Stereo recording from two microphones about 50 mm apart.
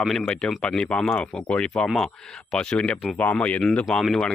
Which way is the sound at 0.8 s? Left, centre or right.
Centre.